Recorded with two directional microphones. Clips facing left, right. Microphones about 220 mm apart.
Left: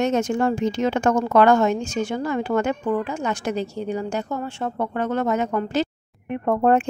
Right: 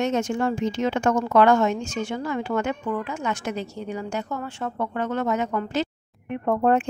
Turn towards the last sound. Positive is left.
turn(degrees=50)  # may be behind; listen again after turning